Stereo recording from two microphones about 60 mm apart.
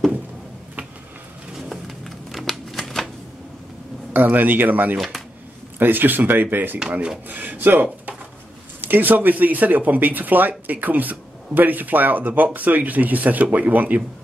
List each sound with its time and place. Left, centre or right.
1.7 s a sound: centre
2.8 s typewriter: centre
4.1 s speech: right
4.9 s speech: centre
5.8 s speech: right
6.9 s speech: centre
7.2 s speech: right